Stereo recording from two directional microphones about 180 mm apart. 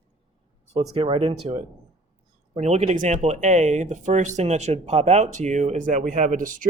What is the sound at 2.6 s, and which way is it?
Speech, 35° right (ahead or behind).